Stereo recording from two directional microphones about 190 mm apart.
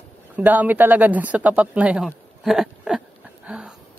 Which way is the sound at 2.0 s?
Centre (ahead or behind).